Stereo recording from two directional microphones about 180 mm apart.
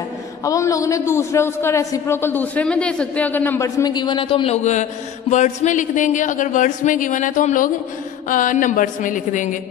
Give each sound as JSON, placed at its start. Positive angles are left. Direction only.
{"t": 0.5, "sound": "a man's voice", "side_deg": 20}